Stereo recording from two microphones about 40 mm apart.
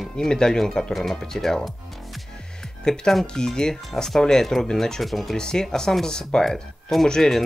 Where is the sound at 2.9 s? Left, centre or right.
Centre.